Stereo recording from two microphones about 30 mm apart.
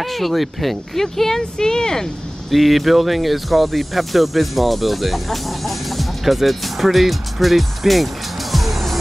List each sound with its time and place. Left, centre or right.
0.0 s speech: centre
1.4 s speech: left
2.5 s speech: centre